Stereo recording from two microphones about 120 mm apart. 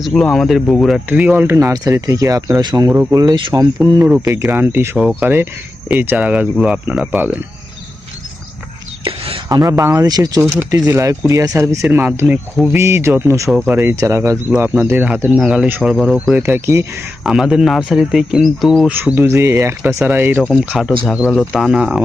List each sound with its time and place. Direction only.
0.0 s speech: 5° left (ahead or behind)
1.2 s speech: 15° right (ahead or behind); by 2.9 s 35° right (ahead or behind)
2.9 s speech: 20° right (ahead or behind)
3.2 s speech: 40° right (ahead or behind); by 7.3 s 10° right (ahead or behind)
9.0 s a sound: 50° right (ahead or behind)
9.5 s speech: 30° right (ahead or behind); by 16.3 s centre (ahead or behind)
16.4 s speech: 20° right (ahead or behind)
17.2 s speech: 5° right (ahead or behind)
18.9 s speech: 15° right (ahead or behind)
20.5 s speech: 5° right (ahead or behind)